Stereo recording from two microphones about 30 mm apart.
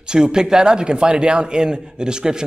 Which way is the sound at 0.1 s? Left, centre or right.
Right.